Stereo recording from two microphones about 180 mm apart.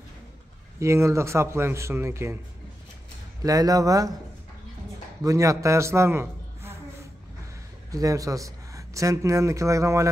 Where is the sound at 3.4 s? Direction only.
20° right (ahead or behind).